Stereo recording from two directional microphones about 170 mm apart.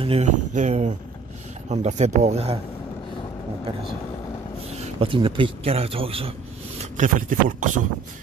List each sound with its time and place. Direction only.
0.0 s speech: 40° right (ahead or behind)
4.7 s a man's voice: 35° right (ahead or behind)
6.8 s speech: 50° right (ahead or behind)